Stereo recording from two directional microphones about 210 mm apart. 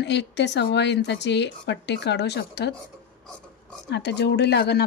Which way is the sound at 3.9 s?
55° left (ahead or behind).